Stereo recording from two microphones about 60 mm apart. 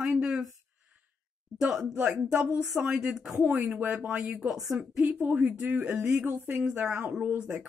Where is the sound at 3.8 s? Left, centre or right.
Right.